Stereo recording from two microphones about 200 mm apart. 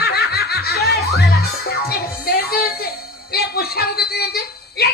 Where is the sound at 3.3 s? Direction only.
50° left (ahead or behind).